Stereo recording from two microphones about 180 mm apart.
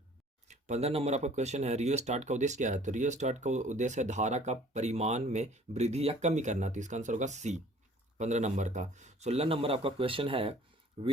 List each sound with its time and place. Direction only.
0.4 s speech: 40° right (ahead or behind)